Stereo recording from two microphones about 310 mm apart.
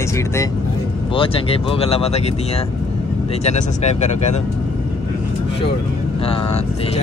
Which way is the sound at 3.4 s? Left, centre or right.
Left.